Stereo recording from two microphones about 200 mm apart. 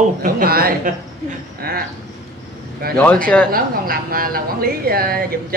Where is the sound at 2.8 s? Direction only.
50° right (ahead or behind).